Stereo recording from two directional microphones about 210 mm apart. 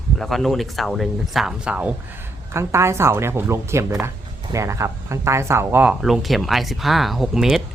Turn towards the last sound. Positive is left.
turn(degrees=0)  # may be behind; listen again after turning